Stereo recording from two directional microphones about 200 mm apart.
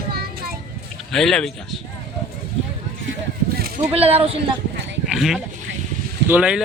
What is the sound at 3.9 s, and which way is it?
Speech, 30° right (ahead or behind).